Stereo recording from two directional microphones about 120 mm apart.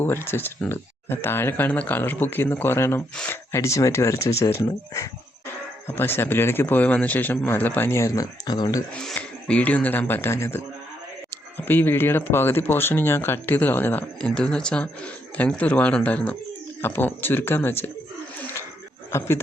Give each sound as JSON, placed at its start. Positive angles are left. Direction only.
{"t": 0.0, "sound": "a man's voice", "side_deg": 20}
{"t": 9.0, "sound": "speech", "side_deg": 10}
{"t": 18.3, "sound": "a sound", "side_deg": 15}